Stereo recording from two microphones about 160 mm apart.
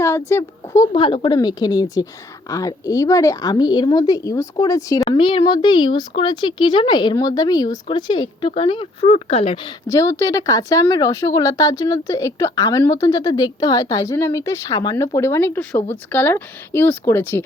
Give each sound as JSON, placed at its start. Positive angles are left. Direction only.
{"t": 0.0, "sound": "a woman's voice", "side_deg": 15}
{"t": 0.9, "sound": "a woman's voice", "side_deg": 30}
{"t": 5.0, "sound": "a woman's voice", "side_deg": 30}
{"t": 9.6, "sound": "a woman's voice", "side_deg": 20}